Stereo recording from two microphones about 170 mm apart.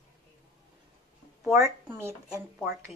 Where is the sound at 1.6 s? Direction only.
15° right (ahead or behind).